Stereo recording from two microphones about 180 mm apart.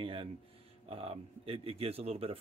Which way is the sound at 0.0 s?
30° right (ahead or behind).